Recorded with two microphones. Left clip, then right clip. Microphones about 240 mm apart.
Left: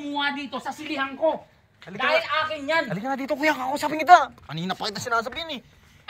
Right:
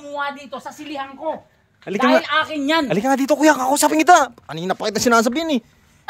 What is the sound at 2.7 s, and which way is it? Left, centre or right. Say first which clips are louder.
Speech: right 10 dB; right.